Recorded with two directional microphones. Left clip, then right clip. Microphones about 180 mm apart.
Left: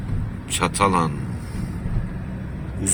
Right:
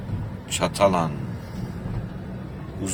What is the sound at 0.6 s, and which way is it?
Speech, 5° right (ahead or behind).